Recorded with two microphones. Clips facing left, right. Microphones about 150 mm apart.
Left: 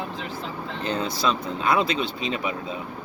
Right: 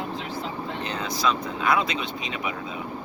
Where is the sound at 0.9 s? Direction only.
30° left (ahead or behind).